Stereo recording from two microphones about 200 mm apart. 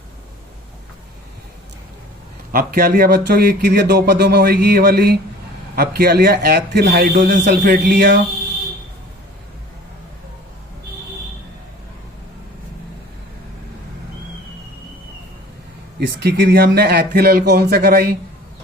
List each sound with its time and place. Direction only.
2.5 s speech: 45° right (ahead or behind)
16.0 s speech: 55° right (ahead or behind)